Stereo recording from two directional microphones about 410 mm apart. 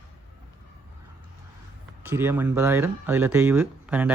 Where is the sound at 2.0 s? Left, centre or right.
Centre.